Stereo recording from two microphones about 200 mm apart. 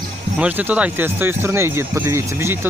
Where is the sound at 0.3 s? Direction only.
5° right (ahead or behind).